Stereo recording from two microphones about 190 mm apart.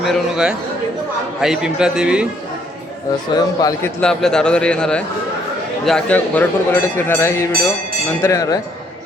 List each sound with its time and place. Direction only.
0.0 s a man's voice: centre (ahead or behind)
3.3 s speech: 20° left (ahead or behind)
4.0 s a man's voice: 5° left (ahead or behind)